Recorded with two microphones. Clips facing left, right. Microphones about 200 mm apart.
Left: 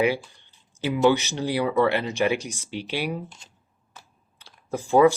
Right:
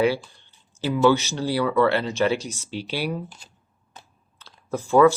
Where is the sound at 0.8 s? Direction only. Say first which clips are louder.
Right 1 dB; 15° left (ahead or behind).